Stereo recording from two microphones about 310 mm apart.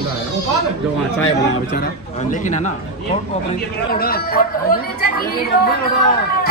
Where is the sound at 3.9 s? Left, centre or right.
Left.